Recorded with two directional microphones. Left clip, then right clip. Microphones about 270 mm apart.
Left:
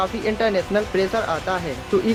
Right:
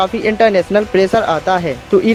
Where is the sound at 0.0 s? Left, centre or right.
Right.